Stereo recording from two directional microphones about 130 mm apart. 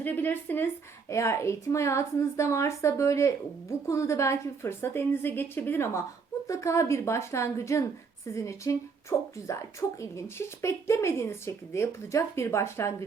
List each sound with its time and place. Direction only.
0.0 s a woman's voice: 15° left (ahead or behind)